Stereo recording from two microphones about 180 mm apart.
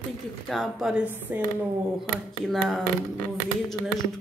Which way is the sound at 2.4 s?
Centre (ahead or behind).